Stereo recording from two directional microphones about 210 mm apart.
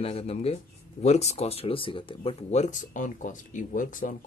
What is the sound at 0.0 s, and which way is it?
Speech, 30° left (ahead or behind).